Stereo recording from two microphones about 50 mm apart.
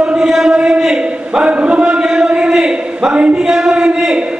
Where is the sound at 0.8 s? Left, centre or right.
Centre.